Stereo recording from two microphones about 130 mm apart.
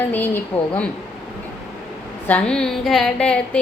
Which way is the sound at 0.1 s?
15° left (ahead or behind).